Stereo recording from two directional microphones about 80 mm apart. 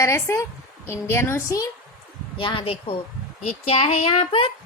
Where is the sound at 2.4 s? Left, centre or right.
Left.